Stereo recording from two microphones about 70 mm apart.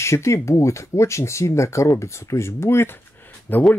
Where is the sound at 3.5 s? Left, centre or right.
Left.